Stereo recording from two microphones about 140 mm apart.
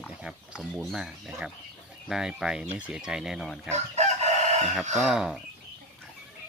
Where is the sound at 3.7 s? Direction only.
55° right (ahead or behind).